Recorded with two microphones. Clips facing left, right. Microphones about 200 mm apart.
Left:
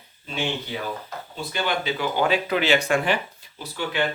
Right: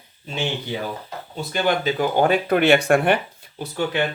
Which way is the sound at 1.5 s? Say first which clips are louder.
Right 5 dB; 45° right (ahead or behind).